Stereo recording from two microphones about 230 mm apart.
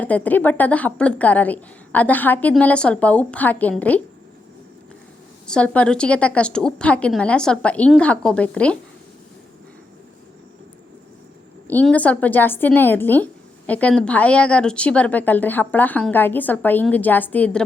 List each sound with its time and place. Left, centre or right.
0.0 s a woman's voice: centre
5.5 s a woman's voice: centre
11.7 s a woman's voice: centre